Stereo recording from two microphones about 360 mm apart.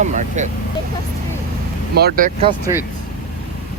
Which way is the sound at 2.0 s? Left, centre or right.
Right.